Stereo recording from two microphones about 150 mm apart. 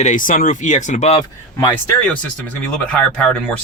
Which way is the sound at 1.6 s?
20° left (ahead or behind).